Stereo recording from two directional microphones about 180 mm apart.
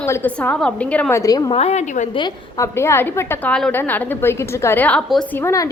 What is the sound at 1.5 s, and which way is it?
Speech, 35° left (ahead or behind).